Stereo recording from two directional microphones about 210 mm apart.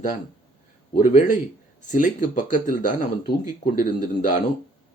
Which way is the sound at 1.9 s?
35° left (ahead or behind).